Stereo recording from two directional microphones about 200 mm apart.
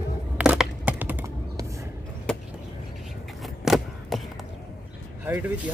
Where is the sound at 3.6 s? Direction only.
Centre (ahead or behind).